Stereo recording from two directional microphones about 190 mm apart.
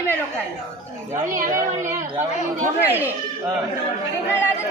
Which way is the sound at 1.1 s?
40° right (ahead or behind).